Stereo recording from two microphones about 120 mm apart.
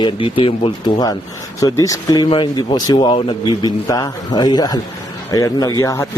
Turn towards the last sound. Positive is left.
turn(degrees=30)  # may be behind; listen again after turning